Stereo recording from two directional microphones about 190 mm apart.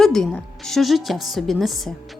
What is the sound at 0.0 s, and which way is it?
Speech, centre (ahead or behind).